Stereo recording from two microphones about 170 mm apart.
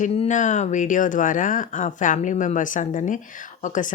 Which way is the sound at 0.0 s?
45° left (ahead or behind).